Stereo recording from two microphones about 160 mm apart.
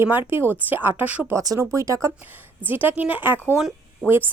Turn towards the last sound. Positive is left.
turn(degrees=0)  # may be behind; listen again after turning